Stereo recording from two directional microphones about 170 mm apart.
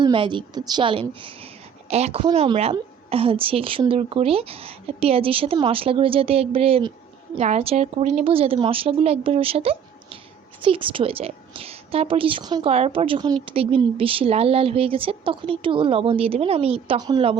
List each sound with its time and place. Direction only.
0.0 s a woman's voice: 30° right (ahead or behind)
12.7 s speech: 35° right (ahead or behind)